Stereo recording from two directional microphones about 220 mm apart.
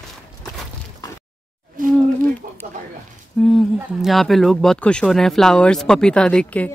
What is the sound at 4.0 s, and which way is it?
Speech, centre (ahead or behind).